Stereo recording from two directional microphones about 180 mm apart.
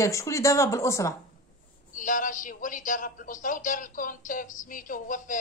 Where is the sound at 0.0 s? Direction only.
15° left (ahead or behind).